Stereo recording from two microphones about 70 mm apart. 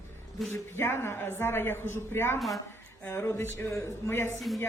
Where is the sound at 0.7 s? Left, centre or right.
Left.